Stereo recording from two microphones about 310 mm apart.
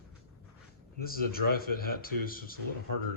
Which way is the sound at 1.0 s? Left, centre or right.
Left.